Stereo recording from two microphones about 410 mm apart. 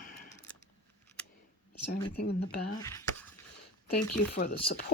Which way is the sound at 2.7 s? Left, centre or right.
Centre.